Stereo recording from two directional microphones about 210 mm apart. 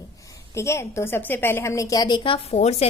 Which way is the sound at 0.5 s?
15° left (ahead or behind).